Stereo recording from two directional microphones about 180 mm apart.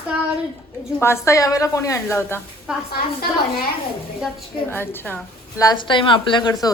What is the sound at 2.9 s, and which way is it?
Speech, 55° left (ahead or behind).